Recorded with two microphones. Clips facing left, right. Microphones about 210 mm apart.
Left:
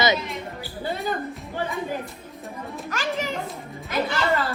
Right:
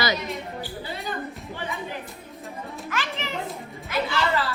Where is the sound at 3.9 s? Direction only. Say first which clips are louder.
Left 2 dB; 50° left (ahead or behind).